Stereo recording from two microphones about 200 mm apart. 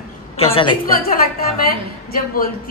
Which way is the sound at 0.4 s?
25° left (ahead or behind).